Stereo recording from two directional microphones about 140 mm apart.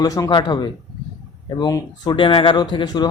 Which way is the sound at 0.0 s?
25° left (ahead or behind).